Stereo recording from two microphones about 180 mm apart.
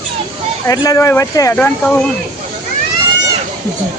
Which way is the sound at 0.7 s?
15° left (ahead or behind).